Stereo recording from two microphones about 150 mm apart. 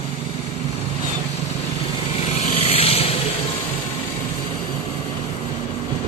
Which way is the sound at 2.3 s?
40° left (ahead or behind).